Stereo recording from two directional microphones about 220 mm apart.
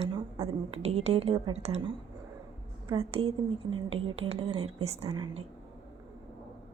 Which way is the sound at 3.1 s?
25° right (ahead or behind).